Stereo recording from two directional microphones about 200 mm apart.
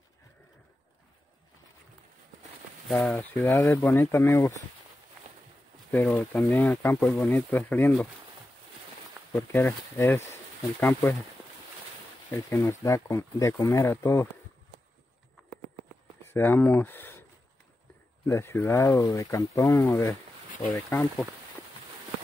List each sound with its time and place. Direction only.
2.9 s speech: 5° left (ahead or behind)
5.2 s a sound: 35° right (ahead or behind)
5.9 s speech: 10° left (ahead or behind)
9.3 s speech: 10° left (ahead or behind)
12.3 s speech: 15° left (ahead or behind)
16.3 s speech: 10° left (ahead or behind)
18.2 s speech: 10° left (ahead or behind)